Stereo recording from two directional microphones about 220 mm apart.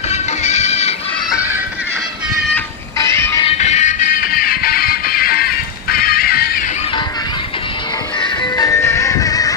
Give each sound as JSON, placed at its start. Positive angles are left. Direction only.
{"t": 0.1, "sound": "music", "side_deg": 30}
{"t": 3.0, "sound": "music", "side_deg": 10}
{"t": 3.4, "sound": "music", "side_deg": 30}
{"t": 8.2, "sound": "music", "side_deg": 15}